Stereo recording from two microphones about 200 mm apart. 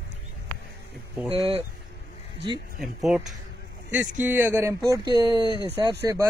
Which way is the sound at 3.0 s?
Centre (ahead or behind).